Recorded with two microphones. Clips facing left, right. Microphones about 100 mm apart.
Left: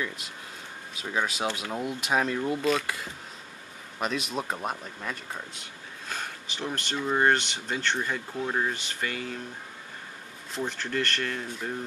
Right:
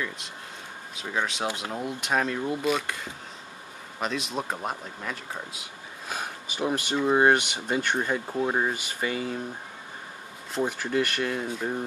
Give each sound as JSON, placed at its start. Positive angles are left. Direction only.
{"t": 0.9, "sound": "speech", "side_deg": 5}
{"t": 4.0, "sound": "speech", "side_deg": 0}
{"t": 8.3, "sound": "speech", "side_deg": -25}
{"t": 8.7, "sound": "speech", "side_deg": -10}
{"t": 10.6, "sound": "speech", "side_deg": -10}